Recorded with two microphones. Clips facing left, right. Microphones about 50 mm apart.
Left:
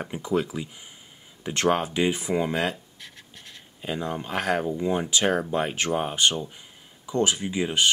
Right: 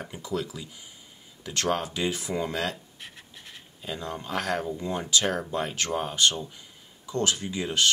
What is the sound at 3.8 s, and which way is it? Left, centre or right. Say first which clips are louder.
Speech: left 5 dB; left.